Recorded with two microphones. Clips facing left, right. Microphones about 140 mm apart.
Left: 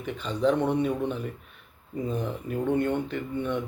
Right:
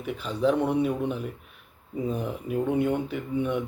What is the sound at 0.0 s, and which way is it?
Speech, 5° right (ahead or behind).